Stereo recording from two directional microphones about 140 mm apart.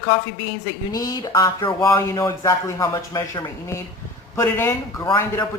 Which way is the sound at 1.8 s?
20° left (ahead or behind).